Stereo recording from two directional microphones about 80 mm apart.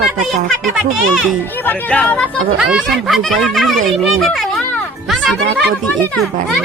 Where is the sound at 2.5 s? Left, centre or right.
Centre.